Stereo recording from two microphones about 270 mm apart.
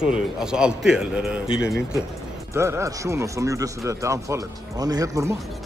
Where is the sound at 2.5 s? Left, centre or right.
Centre.